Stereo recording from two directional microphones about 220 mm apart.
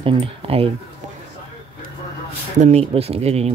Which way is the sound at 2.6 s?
30° right (ahead or behind).